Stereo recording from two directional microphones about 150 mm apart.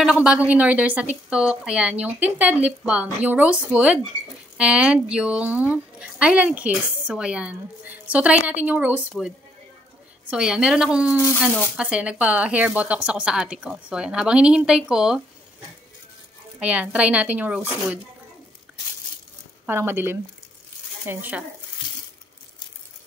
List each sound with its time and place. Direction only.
0.0 s a woman's voice: 5° right (ahead or behind)
10.3 s a woman's voice: 5° right (ahead or behind)
16.5 s a woman's voice: 10° right (ahead or behind)
19.6 s a woman's voice: 15° right (ahead or behind)